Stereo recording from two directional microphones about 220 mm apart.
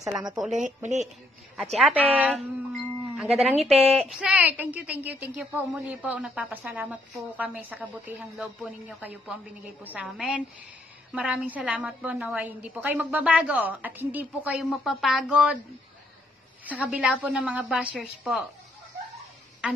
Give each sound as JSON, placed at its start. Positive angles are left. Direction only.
{"t": 0.2, "sound": "a woman's voice", "side_deg": 0}
{"t": 0.5, "sound": "speech", "side_deg": -35}
{"t": 1.6, "sound": "a woman's voice", "side_deg": 0}
{"t": 3.7, "sound": "speech", "side_deg": -25}
{"t": 4.0, "sound": "a woman's voice", "side_deg": -5}
{"t": 16.6, "sound": "a woman's voice", "side_deg": -5}